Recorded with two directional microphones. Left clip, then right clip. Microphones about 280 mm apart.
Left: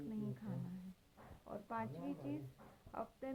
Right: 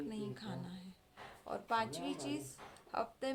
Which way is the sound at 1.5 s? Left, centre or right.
Centre.